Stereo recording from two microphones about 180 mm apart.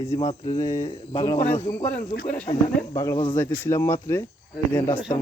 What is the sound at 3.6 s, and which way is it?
Speech, 15° left (ahead or behind).